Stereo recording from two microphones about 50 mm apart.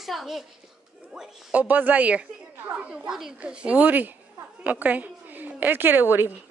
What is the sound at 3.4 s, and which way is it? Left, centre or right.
Speech, right.